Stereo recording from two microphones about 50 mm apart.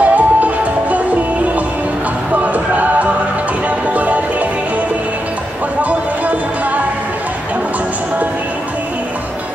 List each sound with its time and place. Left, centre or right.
0.0 s music: right
2.3 s music: right
5.8 s a sound: right